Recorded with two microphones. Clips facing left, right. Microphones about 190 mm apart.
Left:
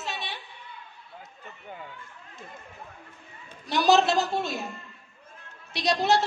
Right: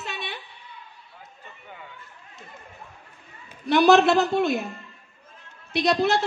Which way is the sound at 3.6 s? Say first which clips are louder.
Right 5 dB; 60° right (ahead or behind).